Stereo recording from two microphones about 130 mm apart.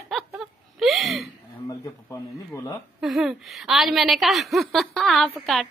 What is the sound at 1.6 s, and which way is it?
Speech, 25° left (ahead or behind).